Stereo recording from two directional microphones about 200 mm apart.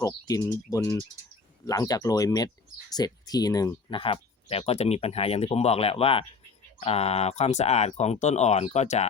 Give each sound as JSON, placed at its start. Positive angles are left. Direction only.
{"t": 0.0, "sound": "speech", "side_deg": 15}